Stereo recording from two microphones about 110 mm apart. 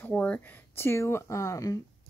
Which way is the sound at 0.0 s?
15° left (ahead or behind).